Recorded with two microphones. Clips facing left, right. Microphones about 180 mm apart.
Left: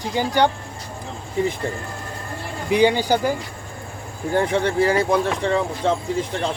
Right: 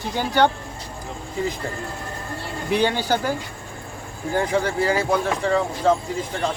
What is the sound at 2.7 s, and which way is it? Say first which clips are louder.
Speech: left 4 dB; 15° left (ahead or behind).